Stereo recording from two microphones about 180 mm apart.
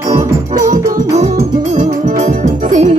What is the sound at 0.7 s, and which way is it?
Music, 45° right (ahead or behind).